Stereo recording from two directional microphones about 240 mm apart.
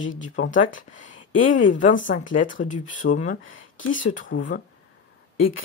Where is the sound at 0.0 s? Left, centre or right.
Left.